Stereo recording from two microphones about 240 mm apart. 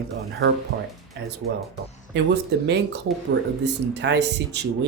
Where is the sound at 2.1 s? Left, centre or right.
Right.